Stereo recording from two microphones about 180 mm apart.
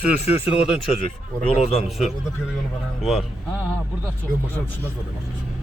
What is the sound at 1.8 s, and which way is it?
Speech, centre (ahead or behind).